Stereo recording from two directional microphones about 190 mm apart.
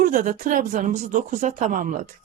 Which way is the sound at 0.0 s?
45° right (ahead or behind).